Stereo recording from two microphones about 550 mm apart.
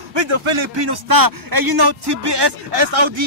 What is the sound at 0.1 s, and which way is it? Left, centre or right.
A man's voice, right.